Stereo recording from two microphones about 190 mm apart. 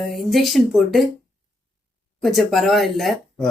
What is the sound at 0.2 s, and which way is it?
Speech, centre (ahead or behind).